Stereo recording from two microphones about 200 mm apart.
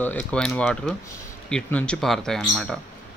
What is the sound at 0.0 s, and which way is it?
Speech, 5° left (ahead or behind).